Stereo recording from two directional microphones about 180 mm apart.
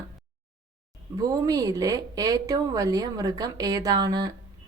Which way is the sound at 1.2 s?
20° right (ahead or behind).